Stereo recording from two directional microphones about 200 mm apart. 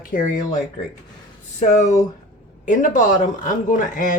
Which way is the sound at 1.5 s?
35° left (ahead or behind).